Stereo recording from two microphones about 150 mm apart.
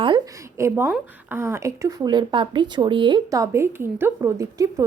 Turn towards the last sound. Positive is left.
turn(degrees=-20)  # may be behind; listen again after turning